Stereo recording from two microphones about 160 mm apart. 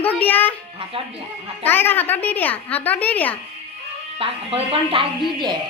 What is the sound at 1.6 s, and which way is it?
A woman's voice, 15° left (ahead or behind).